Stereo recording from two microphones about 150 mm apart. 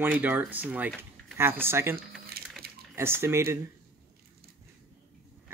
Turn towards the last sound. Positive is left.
turn(degrees=-15)  # may be behind; listen again after turning